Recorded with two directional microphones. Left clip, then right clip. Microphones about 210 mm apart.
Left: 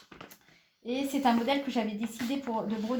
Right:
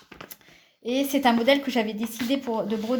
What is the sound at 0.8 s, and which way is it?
Speech, 50° right (ahead or behind).